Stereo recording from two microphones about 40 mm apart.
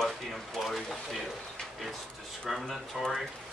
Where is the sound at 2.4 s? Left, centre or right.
Centre.